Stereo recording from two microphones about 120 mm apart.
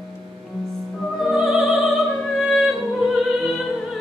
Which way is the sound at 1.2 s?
Centre (ahead or behind).